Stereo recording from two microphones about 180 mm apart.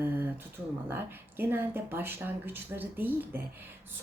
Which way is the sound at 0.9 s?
10° right (ahead or behind).